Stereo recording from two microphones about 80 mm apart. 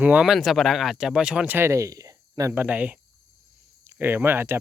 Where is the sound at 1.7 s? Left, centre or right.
Right.